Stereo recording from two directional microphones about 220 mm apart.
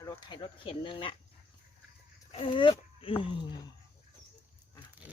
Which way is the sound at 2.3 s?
25° left (ahead or behind).